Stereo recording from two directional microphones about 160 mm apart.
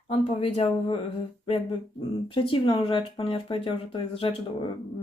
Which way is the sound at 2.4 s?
35° left (ahead or behind).